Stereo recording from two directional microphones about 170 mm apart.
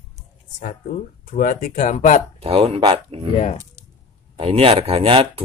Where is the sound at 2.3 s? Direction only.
35° right (ahead or behind).